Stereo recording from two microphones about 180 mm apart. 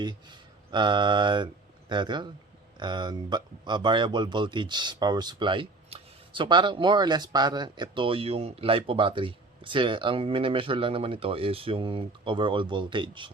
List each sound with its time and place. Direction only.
0.0 s speech: 25° right (ahead or behind)